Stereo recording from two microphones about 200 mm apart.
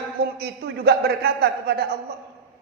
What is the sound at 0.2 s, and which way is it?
A man's voice, 55° right (ahead or behind).